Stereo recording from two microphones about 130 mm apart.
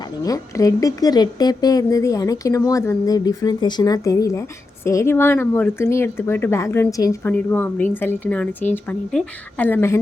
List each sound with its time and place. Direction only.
0.2 s a woman's voice: 25° left (ahead or behind)
7.2 s a woman's voice: 15° left (ahead or behind)